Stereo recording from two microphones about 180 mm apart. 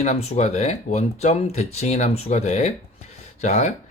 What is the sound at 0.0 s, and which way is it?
Speech, 40° left (ahead or behind).